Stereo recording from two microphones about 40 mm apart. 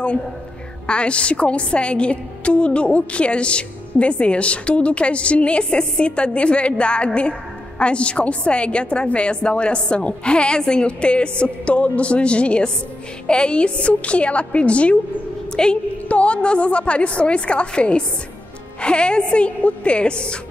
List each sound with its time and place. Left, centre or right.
0.8 s a woman's voice: left
15.5 s a woman's voice: centre
16.1 s a woman's voice: left